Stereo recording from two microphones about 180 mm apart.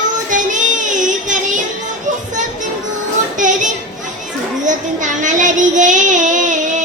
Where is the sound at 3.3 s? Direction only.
45° right (ahead or behind).